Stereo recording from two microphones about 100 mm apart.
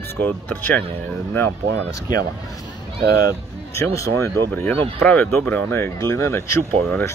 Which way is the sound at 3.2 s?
30° left (ahead or behind).